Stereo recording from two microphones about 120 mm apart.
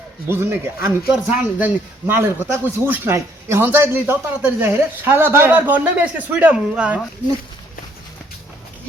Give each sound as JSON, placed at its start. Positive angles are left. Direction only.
{"t": 0.3, "sound": "speech", "side_deg": -20}